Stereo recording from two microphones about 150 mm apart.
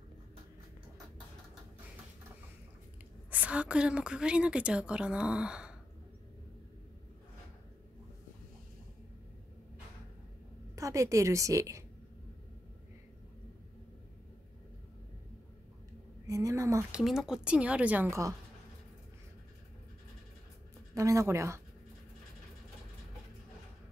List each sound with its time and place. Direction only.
3.3 s a woman's voice: 10° right (ahead or behind)
10.8 s a woman's voice: 20° right (ahead or behind)
16.3 s a sound: 20° right (ahead or behind)
16.9 s a woman's voice: centre (ahead or behind)
20.9 s speech: 20° right (ahead or behind)